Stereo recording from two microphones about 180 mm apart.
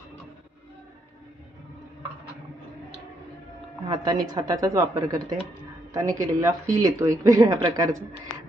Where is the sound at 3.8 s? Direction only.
20° right (ahead or behind).